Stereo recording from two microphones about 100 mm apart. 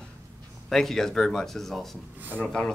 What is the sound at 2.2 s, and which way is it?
Speech, 20° right (ahead or behind).